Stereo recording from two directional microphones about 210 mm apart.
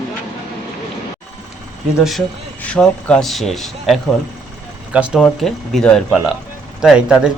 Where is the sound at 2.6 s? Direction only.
5° left (ahead or behind).